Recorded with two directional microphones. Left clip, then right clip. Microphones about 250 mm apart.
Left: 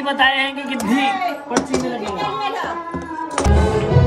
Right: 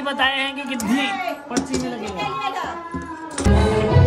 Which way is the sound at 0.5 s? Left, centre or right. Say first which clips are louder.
Left 2 dB; right.